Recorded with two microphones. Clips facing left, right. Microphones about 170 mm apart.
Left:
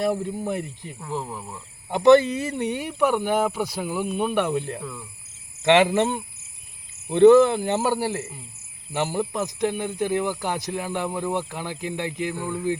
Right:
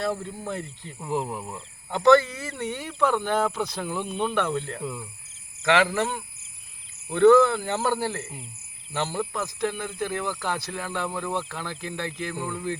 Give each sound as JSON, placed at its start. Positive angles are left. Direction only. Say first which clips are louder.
{"t": 0.0, "sound": "speech", "louder": "left 5 dB", "side_deg": 15}
{"t": 0.9, "sound": "speech", "louder": "right 3 dB", "side_deg": -15}
{"t": 1.9, "sound": "speech", "louder": "left 3 dB", "side_deg": 20}
{"t": 4.8, "sound": "speech", "louder": "right 2 dB", "side_deg": -15}
{"t": 5.6, "sound": "speech", "louder": "left 5 dB", "side_deg": 20}